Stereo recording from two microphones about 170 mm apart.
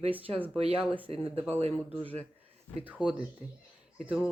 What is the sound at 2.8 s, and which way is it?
Speech, 5° right (ahead or behind).